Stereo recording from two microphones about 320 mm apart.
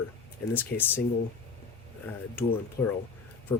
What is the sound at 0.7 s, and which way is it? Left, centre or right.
Speech, left.